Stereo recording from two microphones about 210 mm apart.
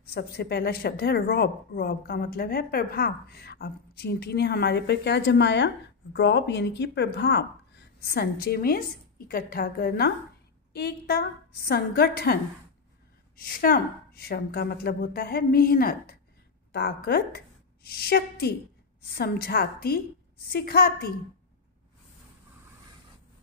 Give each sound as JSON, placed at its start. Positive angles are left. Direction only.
{"t": 0.0, "sound": "speech", "side_deg": 50}
{"t": 13.4, "sound": "speech", "side_deg": 45}